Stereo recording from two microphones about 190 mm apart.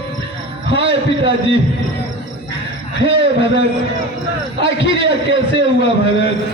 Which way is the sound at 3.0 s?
30° right (ahead or behind).